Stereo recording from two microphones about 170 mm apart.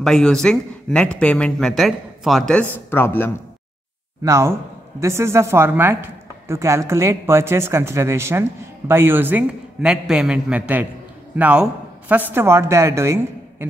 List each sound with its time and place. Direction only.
0.0 s speech: 5° left (ahead or behind)
4.2 s a woman's voice: 15° right (ahead or behind)